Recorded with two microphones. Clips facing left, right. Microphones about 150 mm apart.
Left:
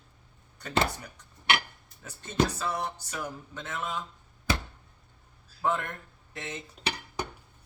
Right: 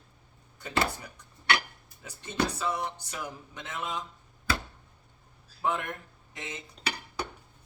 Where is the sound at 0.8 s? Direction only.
20° left (ahead or behind).